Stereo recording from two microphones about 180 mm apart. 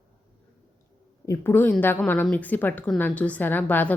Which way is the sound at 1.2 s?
15° left (ahead or behind).